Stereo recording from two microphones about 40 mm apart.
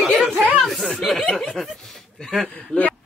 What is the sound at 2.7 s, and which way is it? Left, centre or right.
Speech, left.